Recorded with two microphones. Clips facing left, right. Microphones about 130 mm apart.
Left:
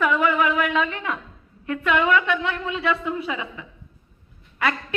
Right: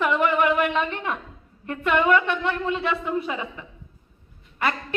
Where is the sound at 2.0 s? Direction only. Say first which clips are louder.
Even; 45° right (ahead or behind).